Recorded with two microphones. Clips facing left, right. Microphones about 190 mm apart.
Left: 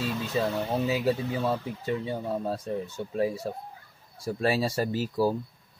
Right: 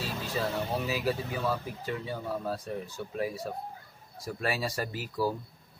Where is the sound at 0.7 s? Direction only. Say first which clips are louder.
Left 5 dB; 25° left (ahead or behind).